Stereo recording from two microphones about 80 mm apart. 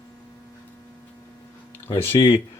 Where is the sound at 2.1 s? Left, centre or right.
Left.